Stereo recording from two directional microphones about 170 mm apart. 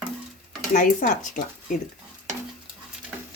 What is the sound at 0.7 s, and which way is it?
Speech, 50° left (ahead or behind).